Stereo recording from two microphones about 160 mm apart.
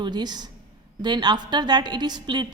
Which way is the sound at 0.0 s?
25° right (ahead or behind).